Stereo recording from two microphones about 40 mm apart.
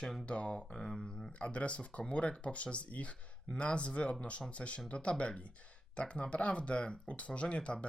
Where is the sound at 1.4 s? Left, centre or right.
Left.